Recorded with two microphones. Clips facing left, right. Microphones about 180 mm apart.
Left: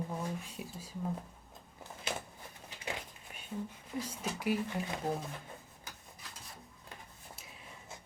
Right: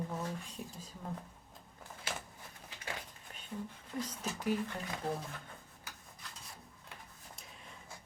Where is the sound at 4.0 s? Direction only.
10° left (ahead or behind).